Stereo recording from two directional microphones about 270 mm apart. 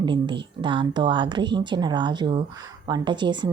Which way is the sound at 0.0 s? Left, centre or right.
Centre.